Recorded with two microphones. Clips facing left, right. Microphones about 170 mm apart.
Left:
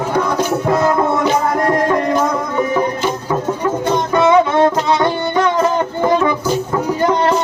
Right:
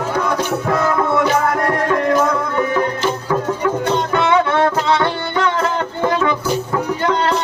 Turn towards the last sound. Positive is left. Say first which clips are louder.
# left 3 dB
turn(degrees=15)  # may be behind; listen again after turning